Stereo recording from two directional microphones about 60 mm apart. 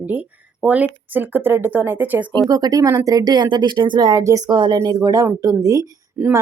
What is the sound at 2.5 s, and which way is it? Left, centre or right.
Speech, right.